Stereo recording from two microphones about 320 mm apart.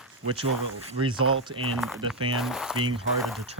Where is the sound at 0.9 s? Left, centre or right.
Centre.